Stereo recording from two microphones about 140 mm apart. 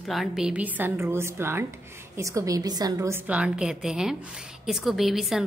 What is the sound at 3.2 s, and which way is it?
A woman's voice, 10° right (ahead or behind).